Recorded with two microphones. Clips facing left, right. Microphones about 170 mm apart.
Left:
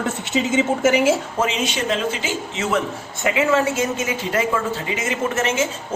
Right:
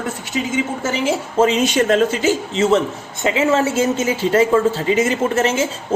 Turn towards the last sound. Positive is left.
turn(degrees=-30)  # may be behind; listen again after turning